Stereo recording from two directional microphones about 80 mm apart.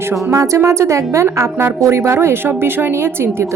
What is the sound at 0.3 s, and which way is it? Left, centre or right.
A woman's voice, right.